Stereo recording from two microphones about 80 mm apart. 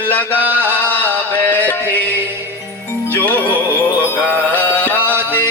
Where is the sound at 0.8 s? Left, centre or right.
Centre.